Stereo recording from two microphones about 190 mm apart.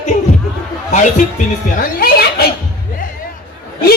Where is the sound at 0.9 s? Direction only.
40° left (ahead or behind).